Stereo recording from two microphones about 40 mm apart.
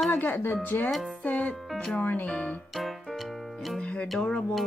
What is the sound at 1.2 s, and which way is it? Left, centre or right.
Music, left.